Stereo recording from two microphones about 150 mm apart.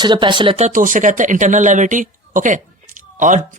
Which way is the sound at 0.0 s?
30° right (ahead or behind).